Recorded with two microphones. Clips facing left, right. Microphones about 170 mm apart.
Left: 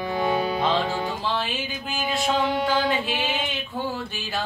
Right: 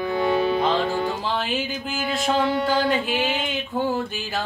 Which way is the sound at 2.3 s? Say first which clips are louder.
Right 3 dB; 20° left (ahead or behind).